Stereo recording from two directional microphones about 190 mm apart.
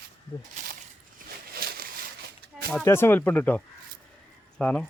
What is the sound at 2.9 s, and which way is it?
Speech, 10° left (ahead or behind).